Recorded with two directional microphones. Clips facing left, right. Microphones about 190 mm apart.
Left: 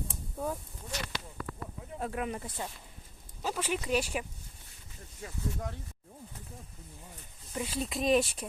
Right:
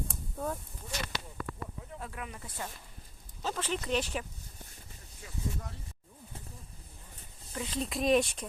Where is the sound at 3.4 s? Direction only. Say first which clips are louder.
Left 1 dB; 10° left (ahead or behind).